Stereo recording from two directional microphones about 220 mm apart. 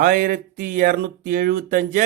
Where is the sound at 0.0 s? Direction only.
40° right (ahead or behind).